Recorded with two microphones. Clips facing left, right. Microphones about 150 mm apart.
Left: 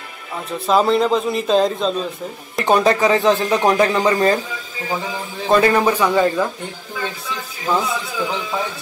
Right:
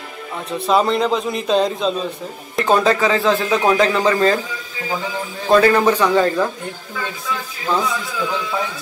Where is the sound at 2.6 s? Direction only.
15° left (ahead or behind).